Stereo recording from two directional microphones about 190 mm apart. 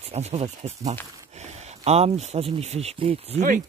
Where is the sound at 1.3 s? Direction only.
35° right (ahead or behind).